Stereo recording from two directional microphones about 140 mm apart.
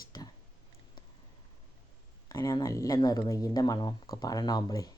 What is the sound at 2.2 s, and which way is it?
Speech, 25° left (ahead or behind).